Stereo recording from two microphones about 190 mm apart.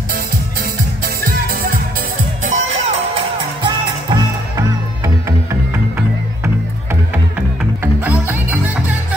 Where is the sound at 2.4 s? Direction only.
35° right (ahead or behind).